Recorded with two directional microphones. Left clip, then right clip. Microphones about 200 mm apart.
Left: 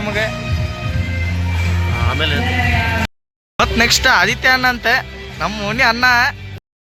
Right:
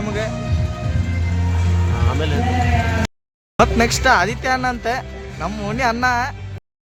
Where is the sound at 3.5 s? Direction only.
10° right (ahead or behind).